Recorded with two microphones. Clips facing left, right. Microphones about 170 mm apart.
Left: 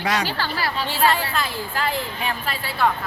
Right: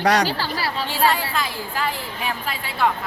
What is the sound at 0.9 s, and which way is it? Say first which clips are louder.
A woman's voice: even; 10° right (ahead or behind).